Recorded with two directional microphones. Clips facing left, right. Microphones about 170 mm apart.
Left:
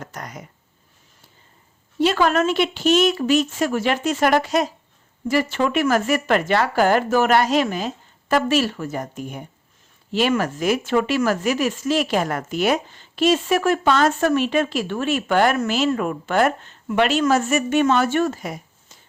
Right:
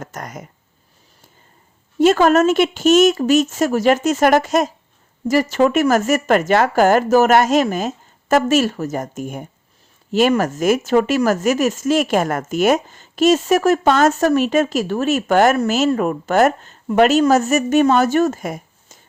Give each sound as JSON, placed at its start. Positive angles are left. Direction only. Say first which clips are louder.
{"t": 0.0, "sound": "speech", "louder": "right 3 dB", "side_deg": -45}
{"t": 2.0, "sound": "speech", "louder": "right 6 dB", "side_deg": -45}